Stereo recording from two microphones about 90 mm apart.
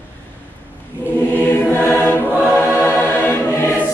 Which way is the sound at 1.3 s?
25° left (ahead or behind).